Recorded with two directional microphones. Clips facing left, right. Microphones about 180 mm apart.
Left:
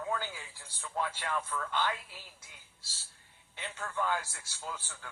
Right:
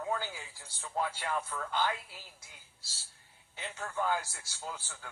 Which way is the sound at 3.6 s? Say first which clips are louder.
Even; 35° right (ahead or behind).